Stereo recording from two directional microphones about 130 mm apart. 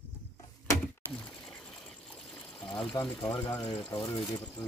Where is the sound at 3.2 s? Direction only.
40° left (ahead or behind).